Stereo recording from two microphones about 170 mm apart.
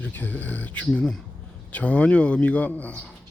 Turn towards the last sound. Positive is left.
turn(degrees=10)  # may be behind; listen again after turning